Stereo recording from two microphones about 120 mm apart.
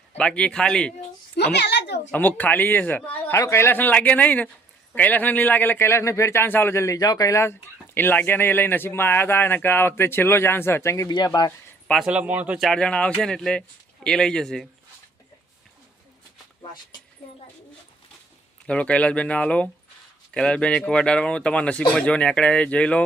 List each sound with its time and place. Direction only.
0.2 s speech: 10° left (ahead or behind)
2.0 s speech: 15° left (ahead or behind); by 11.5 s 35° left (ahead or behind)
12.0 s speech: 10° right (ahead or behind)
12.5 s speech: 5° left (ahead or behind)
18.6 s speech: 10° left (ahead or behind)